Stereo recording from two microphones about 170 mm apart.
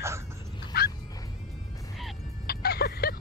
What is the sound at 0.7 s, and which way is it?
Dog, 70° left (ahead or behind).